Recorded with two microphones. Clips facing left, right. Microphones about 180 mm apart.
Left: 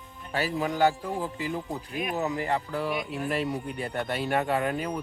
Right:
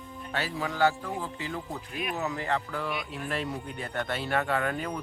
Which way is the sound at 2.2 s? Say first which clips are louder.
Left 2 dB; 15° left (ahead or behind).